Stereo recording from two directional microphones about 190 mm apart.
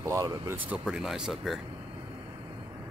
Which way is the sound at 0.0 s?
15° right (ahead or behind).